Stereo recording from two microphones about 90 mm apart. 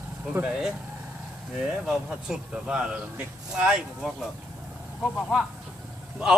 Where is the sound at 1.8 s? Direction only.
10° right (ahead or behind).